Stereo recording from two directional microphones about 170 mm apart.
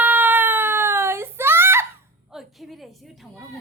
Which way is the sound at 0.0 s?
10° right (ahead or behind).